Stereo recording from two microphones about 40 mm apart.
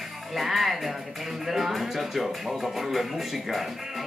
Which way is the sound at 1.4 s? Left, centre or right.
Centre.